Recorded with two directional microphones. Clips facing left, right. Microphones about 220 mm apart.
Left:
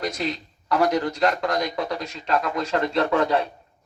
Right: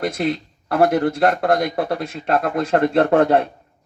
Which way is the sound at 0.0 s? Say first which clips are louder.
Right 6 dB; 55° right (ahead or behind).